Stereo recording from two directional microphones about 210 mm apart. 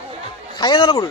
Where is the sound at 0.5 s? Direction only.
20° left (ahead or behind).